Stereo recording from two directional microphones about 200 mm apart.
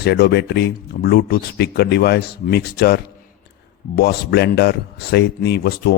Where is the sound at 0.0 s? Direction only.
55° left (ahead or behind).